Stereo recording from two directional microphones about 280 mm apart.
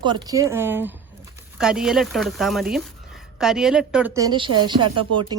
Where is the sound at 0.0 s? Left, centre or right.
Centre.